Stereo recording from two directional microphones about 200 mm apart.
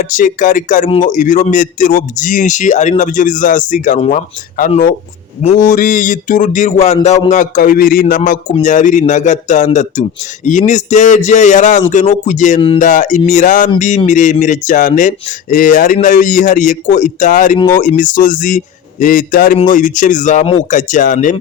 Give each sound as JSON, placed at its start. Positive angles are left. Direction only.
{"t": 0.0, "sound": "speech", "side_deg": 40}
{"t": 12.5, "sound": "speech", "side_deg": 25}
{"t": 12.8, "sound": "speech", "side_deg": 40}